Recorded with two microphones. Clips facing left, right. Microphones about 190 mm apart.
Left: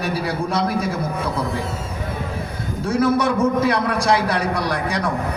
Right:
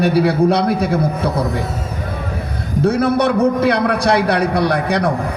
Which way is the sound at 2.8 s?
65° right (ahead or behind).